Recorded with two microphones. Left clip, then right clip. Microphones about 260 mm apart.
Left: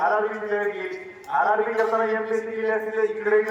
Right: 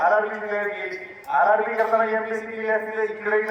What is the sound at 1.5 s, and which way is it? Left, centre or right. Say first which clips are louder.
A man's voice: right 2 dB; centre.